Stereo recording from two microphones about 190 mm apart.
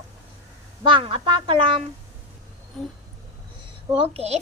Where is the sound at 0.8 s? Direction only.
30° right (ahead or behind).